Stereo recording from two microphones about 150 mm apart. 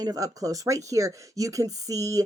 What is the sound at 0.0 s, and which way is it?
Speech, 25° right (ahead or behind).